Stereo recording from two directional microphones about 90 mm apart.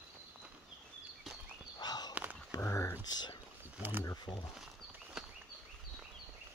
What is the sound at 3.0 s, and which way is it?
Speech, 50° left (ahead or behind).